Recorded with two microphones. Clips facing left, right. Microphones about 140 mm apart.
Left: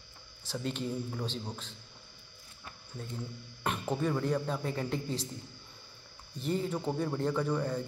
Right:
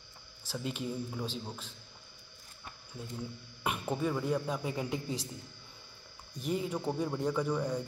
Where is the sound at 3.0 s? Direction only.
10° right (ahead or behind).